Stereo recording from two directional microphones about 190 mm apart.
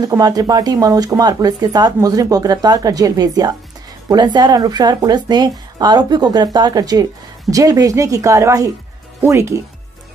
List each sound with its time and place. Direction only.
0.0 s speech: 20° right (ahead or behind)